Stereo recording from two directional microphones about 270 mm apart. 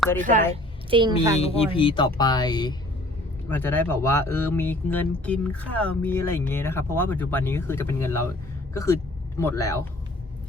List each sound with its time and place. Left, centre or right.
0.2 s a woman's voice: right
0.9 s a woman's voice: centre
1.4 s speech: left